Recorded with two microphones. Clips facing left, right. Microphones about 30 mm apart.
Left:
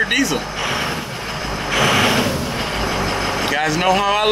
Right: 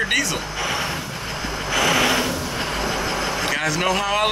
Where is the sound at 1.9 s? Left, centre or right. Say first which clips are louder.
Left 3 dB; left.